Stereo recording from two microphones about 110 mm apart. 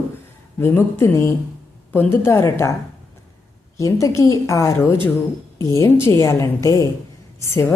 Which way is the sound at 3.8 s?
30° left (ahead or behind).